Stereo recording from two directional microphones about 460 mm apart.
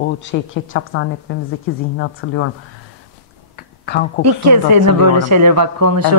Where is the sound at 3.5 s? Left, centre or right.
Left.